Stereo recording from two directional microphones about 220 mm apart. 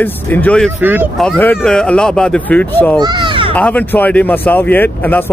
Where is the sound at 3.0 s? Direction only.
20° right (ahead or behind).